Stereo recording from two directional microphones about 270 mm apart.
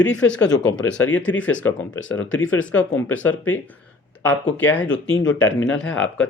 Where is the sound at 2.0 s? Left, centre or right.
Left.